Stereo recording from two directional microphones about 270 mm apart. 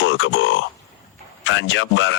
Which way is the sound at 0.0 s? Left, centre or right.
Left.